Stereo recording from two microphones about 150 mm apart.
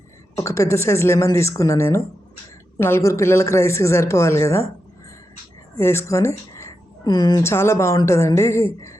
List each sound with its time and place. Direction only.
0.3 s a woman's voice: 20° left (ahead or behind)
5.7 s a woman's voice: 15° left (ahead or behind)